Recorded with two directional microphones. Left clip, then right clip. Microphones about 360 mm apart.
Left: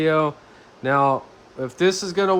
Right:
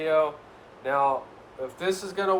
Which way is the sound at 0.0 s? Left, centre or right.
Left.